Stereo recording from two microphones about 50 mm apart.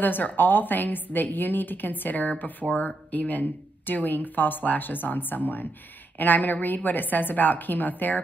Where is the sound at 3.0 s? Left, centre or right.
Left.